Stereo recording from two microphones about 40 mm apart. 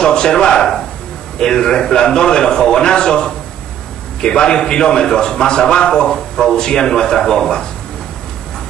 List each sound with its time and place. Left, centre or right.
0.0 s a man's voice: centre